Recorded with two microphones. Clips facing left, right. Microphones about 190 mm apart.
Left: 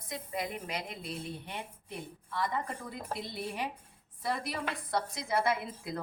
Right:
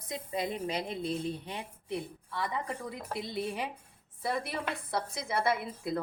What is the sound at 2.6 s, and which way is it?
Speech, 70° right (ahead or behind).